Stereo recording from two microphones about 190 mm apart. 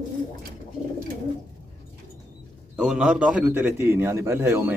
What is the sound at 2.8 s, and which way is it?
A man's voice, 5° right (ahead or behind).